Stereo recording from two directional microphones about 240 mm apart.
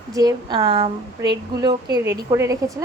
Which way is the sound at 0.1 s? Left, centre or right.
Centre.